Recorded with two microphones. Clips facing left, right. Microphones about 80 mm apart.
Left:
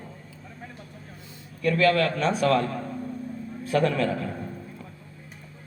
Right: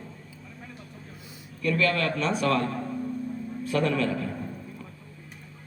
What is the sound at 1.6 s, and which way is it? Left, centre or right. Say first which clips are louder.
Speech: left 4 dB; left.